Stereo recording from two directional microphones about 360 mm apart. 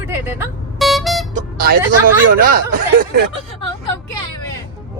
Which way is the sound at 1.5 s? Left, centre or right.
Right.